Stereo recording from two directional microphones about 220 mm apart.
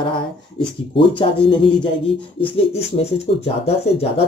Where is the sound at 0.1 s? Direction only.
20° left (ahead or behind).